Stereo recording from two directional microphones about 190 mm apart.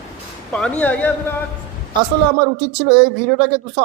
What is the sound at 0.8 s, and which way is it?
Speech, 10° left (ahead or behind).